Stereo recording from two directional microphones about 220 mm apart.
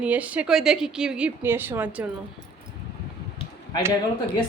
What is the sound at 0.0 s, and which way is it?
A woman's voice, 5° right (ahead or behind).